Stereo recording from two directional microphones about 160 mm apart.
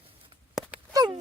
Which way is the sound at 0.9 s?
25° right (ahead or behind).